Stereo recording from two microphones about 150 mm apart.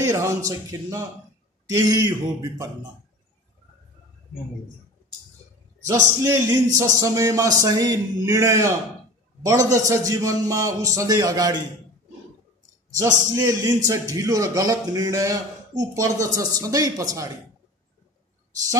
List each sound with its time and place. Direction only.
0.0 s a man's voice: 20° right (ahead or behind)
5.9 s a man's voice: 20° right (ahead or behind)
13.3 s a man's voice: 20° right (ahead or behind)